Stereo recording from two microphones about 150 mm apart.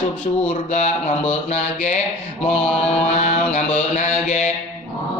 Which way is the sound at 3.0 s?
50° left (ahead or behind).